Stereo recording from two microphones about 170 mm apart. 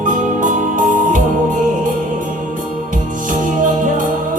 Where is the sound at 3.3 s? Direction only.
50° right (ahead or behind).